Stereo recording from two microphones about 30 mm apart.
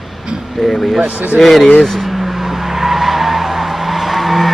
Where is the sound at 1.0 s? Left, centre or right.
Right.